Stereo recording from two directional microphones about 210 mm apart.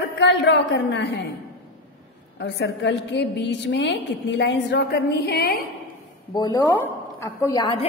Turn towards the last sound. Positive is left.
turn(degrees=20)  # may be behind; listen again after turning